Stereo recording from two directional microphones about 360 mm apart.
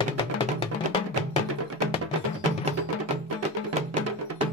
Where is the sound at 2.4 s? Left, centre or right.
Centre.